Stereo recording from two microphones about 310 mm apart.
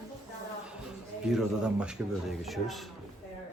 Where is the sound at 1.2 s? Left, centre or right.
Centre.